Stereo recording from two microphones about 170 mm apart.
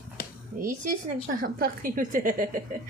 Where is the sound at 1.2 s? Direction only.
60° right (ahead or behind).